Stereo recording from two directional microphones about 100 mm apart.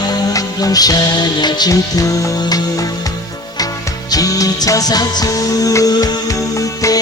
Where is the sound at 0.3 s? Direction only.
40° left (ahead or behind).